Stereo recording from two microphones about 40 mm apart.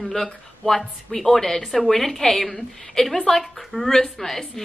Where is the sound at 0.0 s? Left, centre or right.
Centre.